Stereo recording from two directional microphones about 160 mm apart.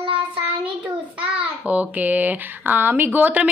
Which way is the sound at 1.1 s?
10° right (ahead or behind).